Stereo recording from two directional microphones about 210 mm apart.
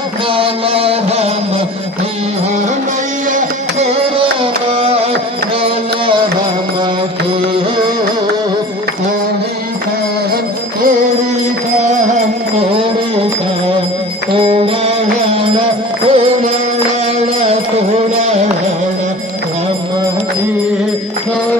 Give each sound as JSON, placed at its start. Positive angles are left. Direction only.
{"t": 0.3, "sound": "music", "side_deg": -25}
{"t": 3.3, "sound": "music", "side_deg": -35}
{"t": 4.8, "sound": "carnatic music", "side_deg": -30}
{"t": 5.6, "sound": "a sound", "side_deg": -25}
{"t": 12.5, "sound": "music", "side_deg": -25}
{"t": 14.4, "sound": "music", "side_deg": -25}